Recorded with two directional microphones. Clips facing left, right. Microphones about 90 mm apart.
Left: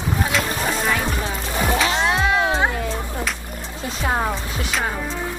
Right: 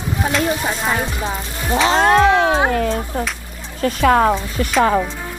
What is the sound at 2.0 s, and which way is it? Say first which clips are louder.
Music: right 7 dB; 50° right (ahead or behind).